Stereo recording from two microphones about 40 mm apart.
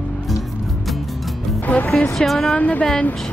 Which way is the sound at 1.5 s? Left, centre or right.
Left.